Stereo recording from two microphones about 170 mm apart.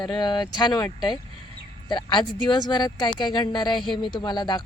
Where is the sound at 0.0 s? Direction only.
25° left (ahead or behind).